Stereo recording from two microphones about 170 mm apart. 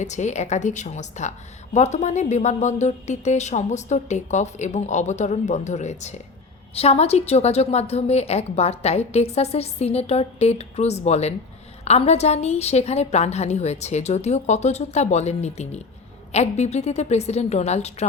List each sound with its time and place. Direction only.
0.0 s a woman's voice: 45° left (ahead or behind)